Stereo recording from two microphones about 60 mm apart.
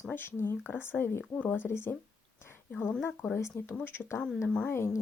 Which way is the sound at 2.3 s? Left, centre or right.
Left.